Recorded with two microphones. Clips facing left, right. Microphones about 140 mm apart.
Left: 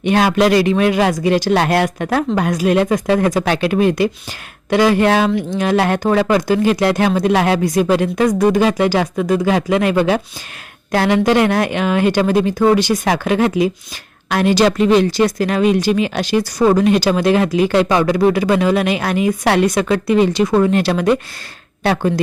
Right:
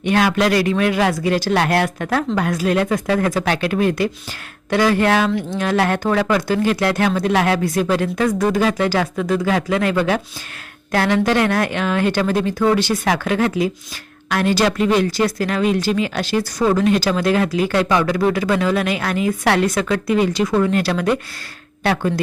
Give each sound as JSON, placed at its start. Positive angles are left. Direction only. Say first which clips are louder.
{"t": 0.0, "sound": "speech", "louder": "left 3 dB", "side_deg": 25}